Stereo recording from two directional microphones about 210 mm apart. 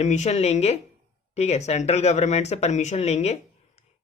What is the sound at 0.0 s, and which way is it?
Speech, 35° left (ahead or behind).